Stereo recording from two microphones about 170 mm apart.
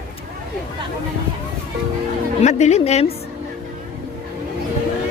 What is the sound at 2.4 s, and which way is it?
Speech, 40° left (ahead or behind).